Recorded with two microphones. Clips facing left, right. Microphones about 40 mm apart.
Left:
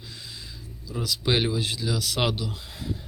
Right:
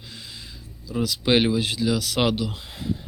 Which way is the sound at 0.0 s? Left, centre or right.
Right.